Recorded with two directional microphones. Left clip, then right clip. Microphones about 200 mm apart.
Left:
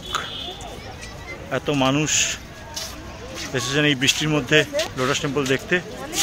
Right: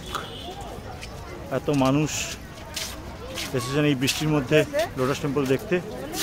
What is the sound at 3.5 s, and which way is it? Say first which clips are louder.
A man's voice: left 4 dB; centre (ahead or behind).